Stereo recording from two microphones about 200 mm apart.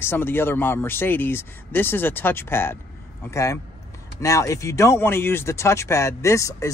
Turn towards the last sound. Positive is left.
turn(degrees=15)  # may be behind; listen again after turning